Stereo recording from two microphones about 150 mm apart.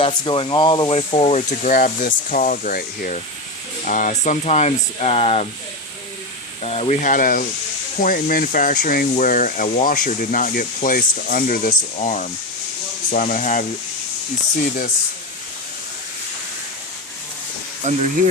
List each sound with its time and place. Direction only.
0.0 s speech: 35° left (ahead or behind); by 3.2 s 70° left (ahead or behind)
3.8 s speech: 60° left (ahead or behind); by 5.5 s 40° left (ahead or behind)
6.6 s speech: 45° left (ahead or behind)
7.0 s speech: 65° left (ahead or behind)
12.0 s speech: 55° left (ahead or behind)
17.8 s speech: 50° right (ahead or behind)